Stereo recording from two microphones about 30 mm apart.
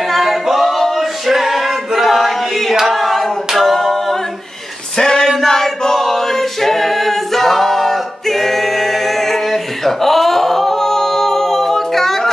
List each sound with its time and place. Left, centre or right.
0.1 s male singing: centre
2.9 s hands: centre
3.5 s a capella: centre
4.9 s a sound: centre
5.5 s a capella: centre